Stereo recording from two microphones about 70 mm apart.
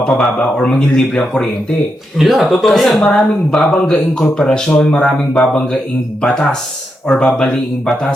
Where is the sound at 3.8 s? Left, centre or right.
Centre.